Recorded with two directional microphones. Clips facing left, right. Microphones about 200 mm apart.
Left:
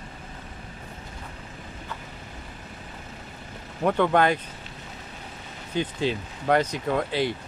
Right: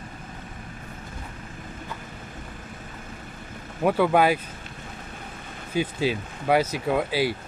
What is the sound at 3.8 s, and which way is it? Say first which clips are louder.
Speech: right 1 dB; 5° right (ahead or behind).